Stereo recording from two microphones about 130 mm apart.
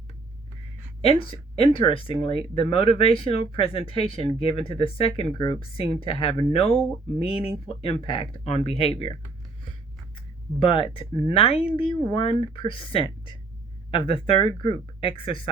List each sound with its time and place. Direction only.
1.0 s speech: 45° left (ahead or behind)
10.2 s speech: 40° left (ahead or behind)